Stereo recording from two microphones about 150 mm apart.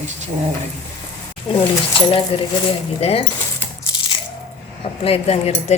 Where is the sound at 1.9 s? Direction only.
40° left (ahead or behind).